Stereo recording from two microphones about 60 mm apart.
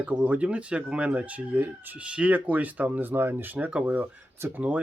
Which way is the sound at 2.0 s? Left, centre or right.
Right.